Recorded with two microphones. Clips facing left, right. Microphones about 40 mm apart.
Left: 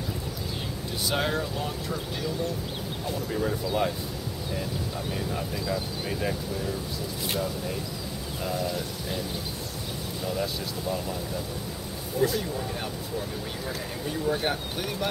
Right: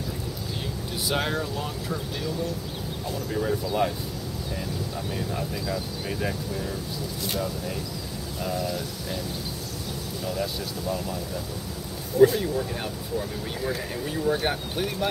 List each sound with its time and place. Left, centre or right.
1.1 s speech: centre
3.3 s speech: centre
5.3 s speech: centre
10.2 s speech: centre
12.2 s speech: left
13.7 s speech: centre